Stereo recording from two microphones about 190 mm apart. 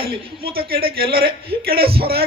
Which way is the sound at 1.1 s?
55° right (ahead or behind).